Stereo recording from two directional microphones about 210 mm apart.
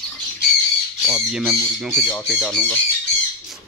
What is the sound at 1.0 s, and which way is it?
Speech, centre (ahead or behind).